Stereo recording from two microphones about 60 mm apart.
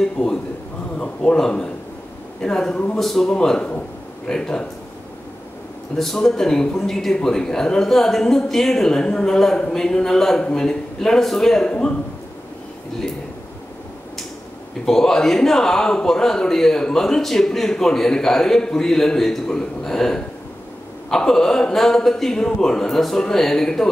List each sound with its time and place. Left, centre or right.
0.0 s a sound: centre
1.3 s speech: centre
5.9 s speech: centre
14.9 s speech: centre